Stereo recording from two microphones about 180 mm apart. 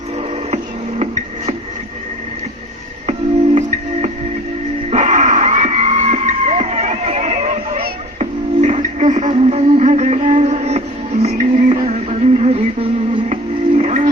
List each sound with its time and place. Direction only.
0.2 s music: 35° right (ahead or behind)
4.9 s screaming: 40° right (ahead or behind)